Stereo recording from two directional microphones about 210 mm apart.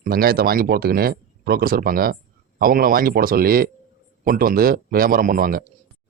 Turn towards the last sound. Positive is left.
turn(degrees=-40)  # may be behind; listen again after turning